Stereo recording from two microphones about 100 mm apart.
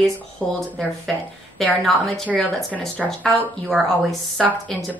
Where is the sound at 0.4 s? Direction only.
5° left (ahead or behind).